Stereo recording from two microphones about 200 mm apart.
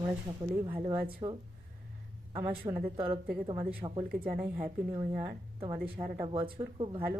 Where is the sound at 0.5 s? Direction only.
15° right (ahead or behind).